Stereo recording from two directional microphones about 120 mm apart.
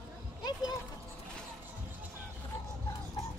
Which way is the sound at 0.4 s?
35° left (ahead or behind).